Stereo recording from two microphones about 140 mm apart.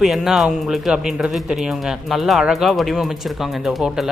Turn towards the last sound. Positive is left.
turn(degrees=0)  # may be behind; listen again after turning